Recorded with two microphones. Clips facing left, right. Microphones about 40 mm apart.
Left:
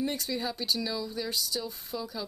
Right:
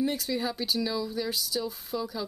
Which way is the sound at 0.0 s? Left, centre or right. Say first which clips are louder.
Right 3 dB; centre.